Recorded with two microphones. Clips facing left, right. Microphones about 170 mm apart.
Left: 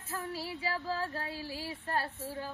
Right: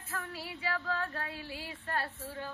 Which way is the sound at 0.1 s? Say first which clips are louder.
Left 3 dB; 35° left (ahead or behind).